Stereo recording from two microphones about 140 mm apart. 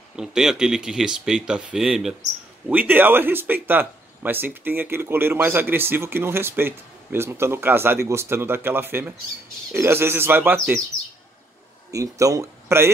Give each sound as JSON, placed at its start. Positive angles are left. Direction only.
{"t": 0.1, "sound": "speech", "side_deg": -5}
{"t": 11.9, "sound": "speech", "side_deg": -25}